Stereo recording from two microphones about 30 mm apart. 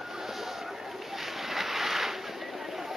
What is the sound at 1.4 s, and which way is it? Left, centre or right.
Boat, centre.